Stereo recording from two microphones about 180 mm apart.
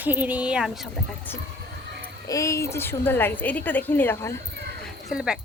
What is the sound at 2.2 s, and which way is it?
A woman's voice, 20° left (ahead or behind).